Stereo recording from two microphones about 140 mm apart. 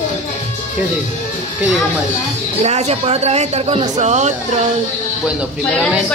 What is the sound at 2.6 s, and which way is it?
Speech, 50° right (ahead or behind).